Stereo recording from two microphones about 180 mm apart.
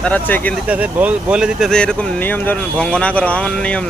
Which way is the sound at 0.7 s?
10° right (ahead or behind).